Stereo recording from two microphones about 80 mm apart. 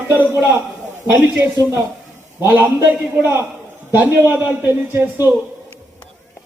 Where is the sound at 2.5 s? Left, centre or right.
Centre.